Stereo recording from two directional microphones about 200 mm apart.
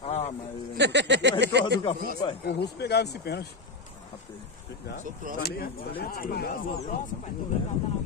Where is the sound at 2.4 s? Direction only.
55° left (ahead or behind).